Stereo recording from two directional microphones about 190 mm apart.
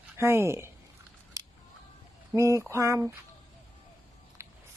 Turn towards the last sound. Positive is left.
turn(degrees=-15)  # may be behind; listen again after turning